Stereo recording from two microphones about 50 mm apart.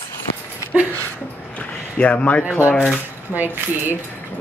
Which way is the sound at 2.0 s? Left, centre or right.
Left.